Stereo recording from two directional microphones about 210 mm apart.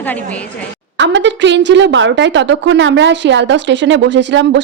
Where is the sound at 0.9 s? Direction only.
60° right (ahead or behind).